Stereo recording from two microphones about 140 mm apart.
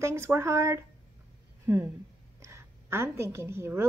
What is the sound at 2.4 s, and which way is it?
A woman's voice, 20° right (ahead or behind).